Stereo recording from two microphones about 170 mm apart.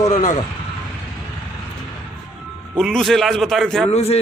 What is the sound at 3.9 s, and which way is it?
Speech, 40° left (ahead or behind).